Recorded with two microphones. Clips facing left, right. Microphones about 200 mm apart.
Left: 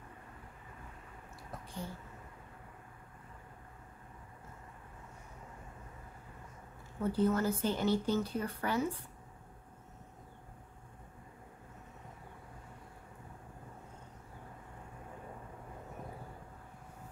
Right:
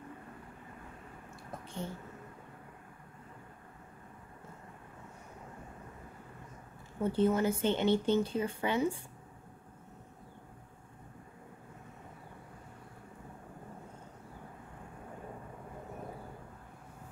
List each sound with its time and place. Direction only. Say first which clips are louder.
7.0 s speech: right 2 dB; 25° right (ahead or behind)